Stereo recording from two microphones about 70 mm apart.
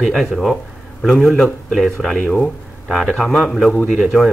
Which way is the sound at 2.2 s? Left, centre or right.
Centre.